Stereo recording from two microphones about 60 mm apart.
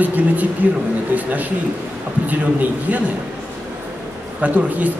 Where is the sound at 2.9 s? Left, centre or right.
Right.